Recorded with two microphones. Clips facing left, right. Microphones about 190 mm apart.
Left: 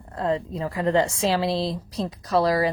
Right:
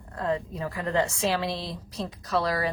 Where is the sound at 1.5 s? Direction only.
90° left.